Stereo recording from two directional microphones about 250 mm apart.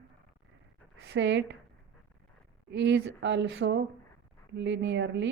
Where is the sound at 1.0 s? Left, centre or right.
Right.